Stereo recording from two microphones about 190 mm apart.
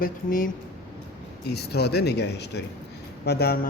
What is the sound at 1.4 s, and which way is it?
A man's voice, 60° left (ahead or behind).